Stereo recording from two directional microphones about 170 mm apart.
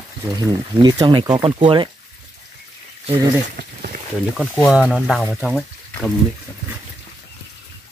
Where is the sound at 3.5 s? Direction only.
55° right (ahead or behind).